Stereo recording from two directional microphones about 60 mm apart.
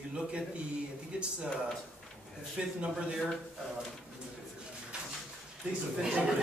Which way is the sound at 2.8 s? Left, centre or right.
Centre.